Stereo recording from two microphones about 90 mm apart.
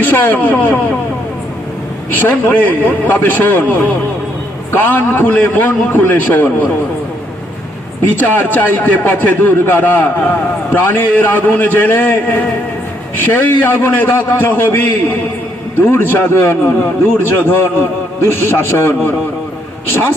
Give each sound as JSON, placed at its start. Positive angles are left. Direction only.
{"t": 0.0, "sound": "a man's voice", "side_deg": 20}
{"t": 2.1, "sound": "a man's voice", "side_deg": 20}
{"t": 8.0, "sound": "a man's voice", "side_deg": 20}
{"t": 13.1, "sound": "a man's voice", "side_deg": 20}